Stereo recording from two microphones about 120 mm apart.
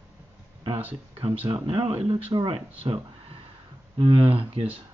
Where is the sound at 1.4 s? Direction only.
50° right (ahead or behind).